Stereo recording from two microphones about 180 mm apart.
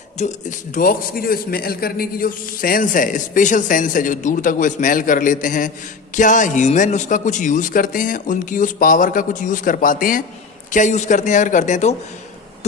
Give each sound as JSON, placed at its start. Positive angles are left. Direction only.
{"t": 0.2, "sound": "a man's voice", "side_deg": 40}